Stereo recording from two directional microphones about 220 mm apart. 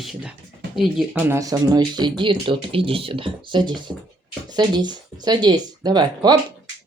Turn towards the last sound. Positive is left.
turn(degrees=-20)  # may be behind; listen again after turning